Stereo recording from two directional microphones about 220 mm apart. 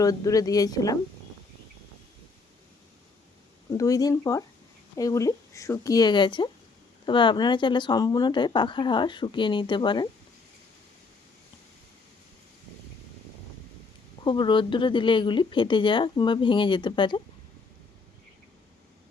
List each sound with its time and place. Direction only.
0.0 s speech: 15° left (ahead or behind)
3.8 s speech: 15° left (ahead or behind)
14.3 s speech: 20° left (ahead or behind)